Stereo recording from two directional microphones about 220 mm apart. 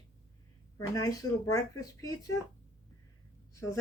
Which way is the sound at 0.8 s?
15° left (ahead or behind).